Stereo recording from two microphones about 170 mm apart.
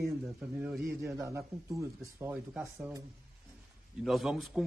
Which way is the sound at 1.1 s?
15° right (ahead or behind).